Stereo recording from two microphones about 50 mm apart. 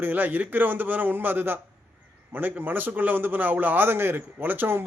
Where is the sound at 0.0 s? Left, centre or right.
Right.